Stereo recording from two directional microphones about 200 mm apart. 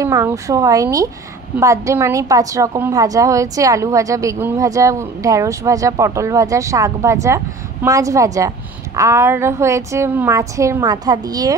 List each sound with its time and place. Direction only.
0.0 s a woman's voice: 15° right (ahead or behind)